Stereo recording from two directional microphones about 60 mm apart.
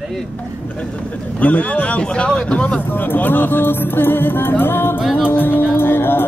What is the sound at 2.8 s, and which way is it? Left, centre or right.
Speech, left.